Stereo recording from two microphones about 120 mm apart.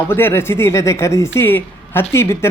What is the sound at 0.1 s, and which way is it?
Speech, 20° left (ahead or behind).